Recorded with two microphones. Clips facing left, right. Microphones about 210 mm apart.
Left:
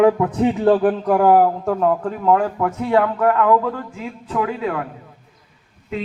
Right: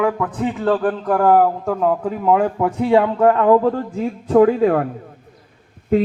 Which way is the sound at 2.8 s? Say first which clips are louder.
Right 3 dB; 25° right (ahead or behind).